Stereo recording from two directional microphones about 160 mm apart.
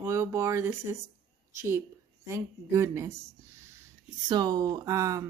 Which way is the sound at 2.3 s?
15° right (ahead or behind).